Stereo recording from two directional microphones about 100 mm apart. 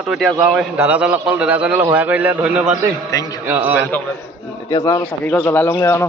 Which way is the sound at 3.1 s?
35° left (ahead or behind).